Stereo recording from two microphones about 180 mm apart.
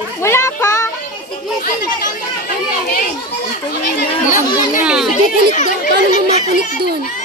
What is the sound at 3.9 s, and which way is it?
Speech, 45° left (ahead or behind).